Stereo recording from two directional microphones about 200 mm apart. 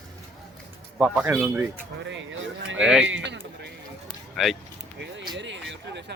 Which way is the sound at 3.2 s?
60° right (ahead or behind).